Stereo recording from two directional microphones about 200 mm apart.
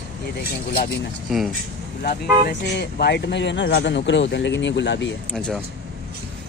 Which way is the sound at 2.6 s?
55° left (ahead or behind).